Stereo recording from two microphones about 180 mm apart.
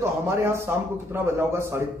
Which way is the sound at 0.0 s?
15° right (ahead or behind).